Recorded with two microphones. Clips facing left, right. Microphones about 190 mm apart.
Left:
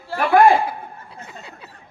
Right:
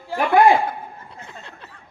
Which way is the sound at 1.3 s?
5° left (ahead or behind).